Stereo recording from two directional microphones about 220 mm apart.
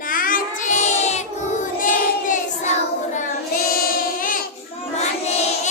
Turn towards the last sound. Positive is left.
turn(degrees=30)  # may be behind; listen again after turning